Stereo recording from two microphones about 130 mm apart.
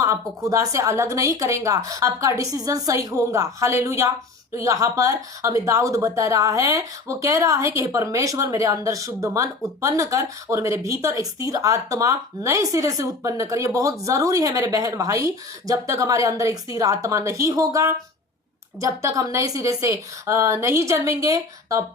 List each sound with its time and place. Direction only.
0.0 s speech: 25° right (ahead or behind)